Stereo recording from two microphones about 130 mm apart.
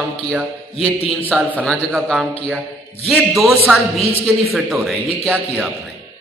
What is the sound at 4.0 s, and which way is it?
Speech, 50° left (ahead or behind).